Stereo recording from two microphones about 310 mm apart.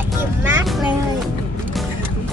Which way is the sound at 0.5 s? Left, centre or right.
Centre.